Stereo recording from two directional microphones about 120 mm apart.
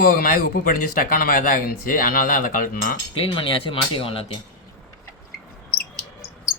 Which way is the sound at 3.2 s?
45° left (ahead or behind).